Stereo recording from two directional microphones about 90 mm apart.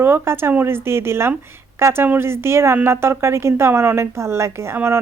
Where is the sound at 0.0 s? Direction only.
25° right (ahead or behind).